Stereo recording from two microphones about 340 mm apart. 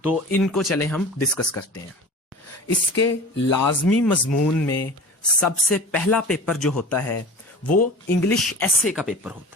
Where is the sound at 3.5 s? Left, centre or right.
Left.